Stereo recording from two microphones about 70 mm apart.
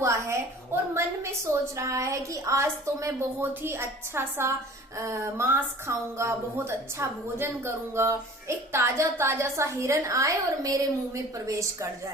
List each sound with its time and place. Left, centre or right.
0.0 s a sound: right
0.9 s a woman's voice: right
3.4 s a woman's voice: right